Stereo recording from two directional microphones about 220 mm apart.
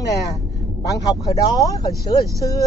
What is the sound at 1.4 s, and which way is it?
Speech, 15° left (ahead or behind).